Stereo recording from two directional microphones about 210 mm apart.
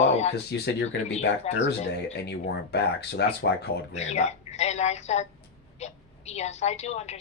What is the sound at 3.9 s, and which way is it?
A woman's voice, 30° left (ahead or behind).